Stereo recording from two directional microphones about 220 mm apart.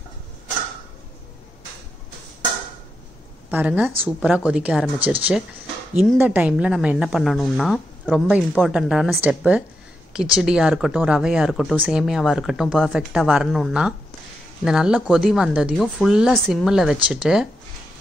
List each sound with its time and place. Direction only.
3.4 s speech: 5° right (ahead or behind)